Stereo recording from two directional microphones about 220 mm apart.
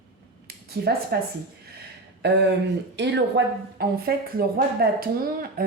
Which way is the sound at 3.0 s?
50° right (ahead or behind).